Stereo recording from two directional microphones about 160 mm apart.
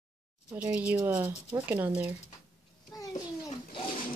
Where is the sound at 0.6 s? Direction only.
5° right (ahead or behind).